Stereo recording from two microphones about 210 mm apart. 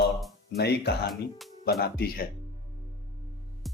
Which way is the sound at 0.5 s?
50° left (ahead or behind).